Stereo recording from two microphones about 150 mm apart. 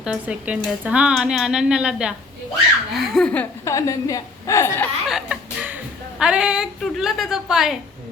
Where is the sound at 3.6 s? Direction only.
20° left (ahead or behind).